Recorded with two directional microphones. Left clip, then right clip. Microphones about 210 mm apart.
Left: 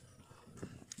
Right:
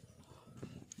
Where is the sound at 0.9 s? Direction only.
45° left (ahead or behind).